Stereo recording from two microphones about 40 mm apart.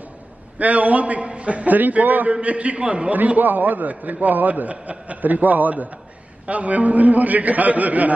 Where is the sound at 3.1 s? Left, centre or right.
Right.